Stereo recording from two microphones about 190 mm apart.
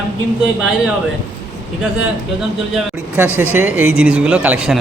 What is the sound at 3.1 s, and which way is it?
Speech, 10° right (ahead or behind).